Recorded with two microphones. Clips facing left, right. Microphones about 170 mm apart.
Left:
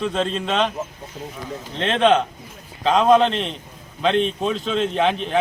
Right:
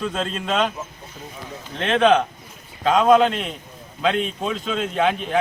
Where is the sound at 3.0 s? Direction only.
5° right (ahead or behind).